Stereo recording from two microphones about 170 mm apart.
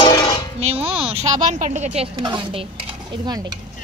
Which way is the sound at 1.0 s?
35° right (ahead or behind).